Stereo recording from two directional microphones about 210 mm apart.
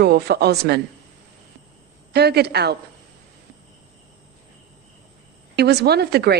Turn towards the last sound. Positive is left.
turn(degrees=-50)  # may be behind; listen again after turning